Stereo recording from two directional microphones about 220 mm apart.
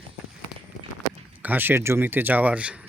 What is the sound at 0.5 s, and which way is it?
Run, 20° left (ahead or behind).